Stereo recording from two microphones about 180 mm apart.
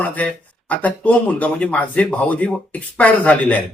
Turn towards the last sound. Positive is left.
turn(degrees=10)  # may be behind; listen again after turning